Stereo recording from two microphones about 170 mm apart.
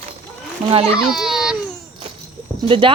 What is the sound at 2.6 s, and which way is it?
Speech, 30° right (ahead or behind).